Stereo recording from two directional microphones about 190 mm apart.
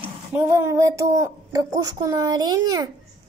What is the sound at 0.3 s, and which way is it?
A woman's voice, 10° right (ahead or behind).